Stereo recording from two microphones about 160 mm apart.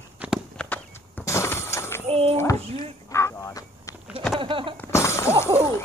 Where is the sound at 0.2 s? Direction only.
10° right (ahead or behind).